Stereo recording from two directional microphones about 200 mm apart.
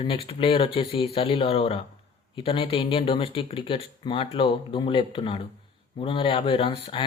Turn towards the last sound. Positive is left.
turn(degrees=25)  # may be behind; listen again after turning